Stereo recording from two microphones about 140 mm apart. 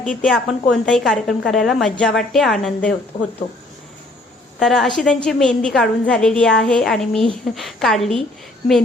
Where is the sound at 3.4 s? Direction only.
60° left (ahead or behind).